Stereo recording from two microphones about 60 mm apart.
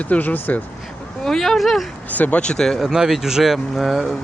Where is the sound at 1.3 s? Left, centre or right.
Centre.